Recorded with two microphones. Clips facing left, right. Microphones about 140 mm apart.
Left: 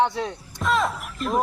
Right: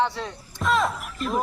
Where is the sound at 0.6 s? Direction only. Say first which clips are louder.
Even; centre (ahead or behind).